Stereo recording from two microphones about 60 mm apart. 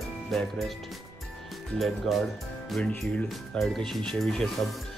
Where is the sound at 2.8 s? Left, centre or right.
Left.